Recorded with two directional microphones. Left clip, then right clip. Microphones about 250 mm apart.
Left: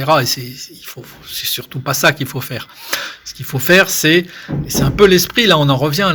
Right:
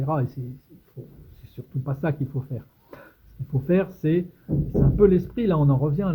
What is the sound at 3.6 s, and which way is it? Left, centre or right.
Speech, centre.